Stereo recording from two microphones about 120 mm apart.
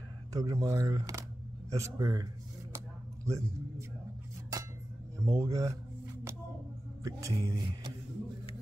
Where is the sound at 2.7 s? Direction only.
25° right (ahead or behind).